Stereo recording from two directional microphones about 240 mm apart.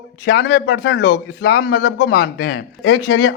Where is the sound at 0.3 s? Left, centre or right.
Left.